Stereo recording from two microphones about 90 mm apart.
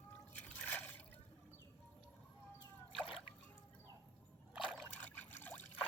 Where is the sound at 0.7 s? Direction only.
20° left (ahead or behind).